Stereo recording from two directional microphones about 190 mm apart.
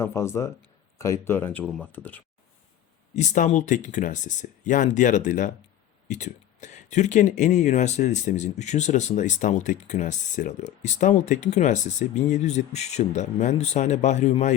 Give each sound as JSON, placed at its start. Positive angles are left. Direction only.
{"t": 0.0, "sound": "speech", "side_deg": 15}
{"t": 3.2, "sound": "speech", "side_deg": 40}